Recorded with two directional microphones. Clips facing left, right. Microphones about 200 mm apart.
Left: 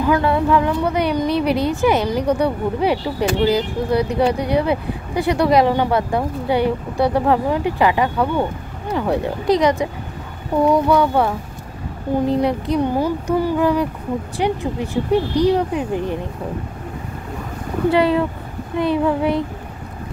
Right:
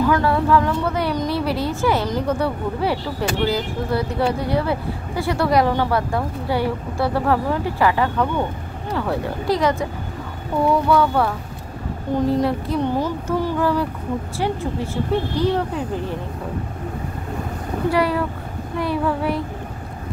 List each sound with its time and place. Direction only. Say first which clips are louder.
0.0 s a woman's voice: left 1 dB; 20° left (ahead or behind)
17.9 s speech: left 4 dB; 25° left (ahead or behind)